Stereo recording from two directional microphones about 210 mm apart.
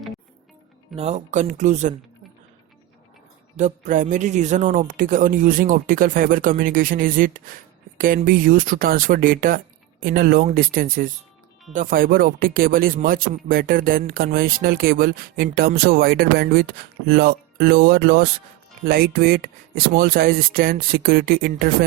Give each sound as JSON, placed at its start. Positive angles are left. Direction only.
{"t": 0.9, "sound": "speech", "side_deg": -30}
{"t": 3.6, "sound": "speech", "side_deg": -35}